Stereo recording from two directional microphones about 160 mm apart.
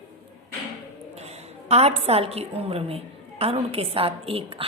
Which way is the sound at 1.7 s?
40° right (ahead or behind).